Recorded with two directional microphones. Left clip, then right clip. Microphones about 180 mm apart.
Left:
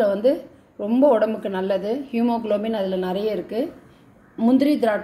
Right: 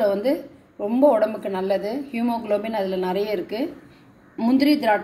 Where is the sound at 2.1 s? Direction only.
40° left (ahead or behind).